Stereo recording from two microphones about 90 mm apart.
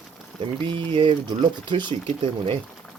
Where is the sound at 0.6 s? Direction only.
65° right (ahead or behind).